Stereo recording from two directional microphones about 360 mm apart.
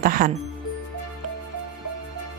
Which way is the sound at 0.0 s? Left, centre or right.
Right.